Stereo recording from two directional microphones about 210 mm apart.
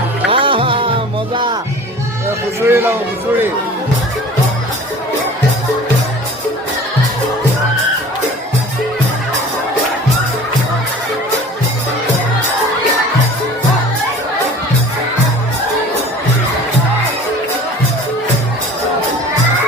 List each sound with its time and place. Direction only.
0.3 s music: 25° right (ahead or behind)
2.6 s a man's voice: 10° right (ahead or behind)